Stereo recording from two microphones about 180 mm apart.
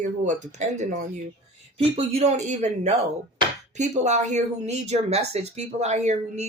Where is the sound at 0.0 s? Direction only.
40° right (ahead or behind).